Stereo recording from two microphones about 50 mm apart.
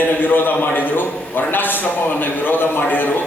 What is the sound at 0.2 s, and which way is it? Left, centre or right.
A man's voice, left.